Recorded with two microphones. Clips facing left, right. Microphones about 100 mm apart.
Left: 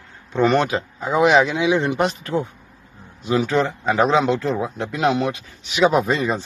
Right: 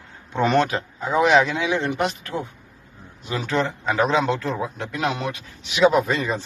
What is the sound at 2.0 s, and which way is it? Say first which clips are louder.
Speech: left 3 dB; 30° left (ahead or behind).